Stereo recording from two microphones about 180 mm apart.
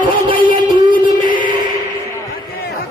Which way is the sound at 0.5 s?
25° right (ahead or behind).